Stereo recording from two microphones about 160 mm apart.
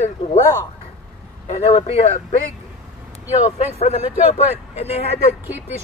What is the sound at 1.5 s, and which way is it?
Speech, 40° left (ahead or behind).